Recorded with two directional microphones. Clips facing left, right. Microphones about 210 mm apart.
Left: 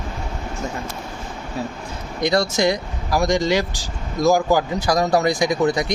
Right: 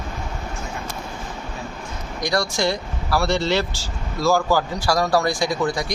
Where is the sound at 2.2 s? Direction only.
20° left (ahead or behind).